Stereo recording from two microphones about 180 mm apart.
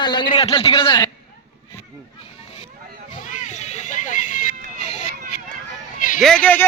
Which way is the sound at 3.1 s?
45° left (ahead or behind).